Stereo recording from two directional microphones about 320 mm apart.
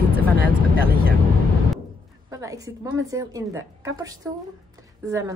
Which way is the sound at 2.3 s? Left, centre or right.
Centre.